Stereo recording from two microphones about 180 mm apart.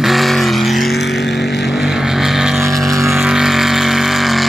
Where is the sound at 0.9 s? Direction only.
70° left (ahead or behind).